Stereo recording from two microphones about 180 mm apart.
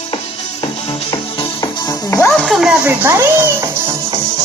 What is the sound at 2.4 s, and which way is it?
Speech, 5° right (ahead or behind).